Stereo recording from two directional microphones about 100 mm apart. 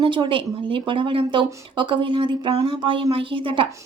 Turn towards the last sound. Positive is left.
turn(degrees=-60)  # may be behind; listen again after turning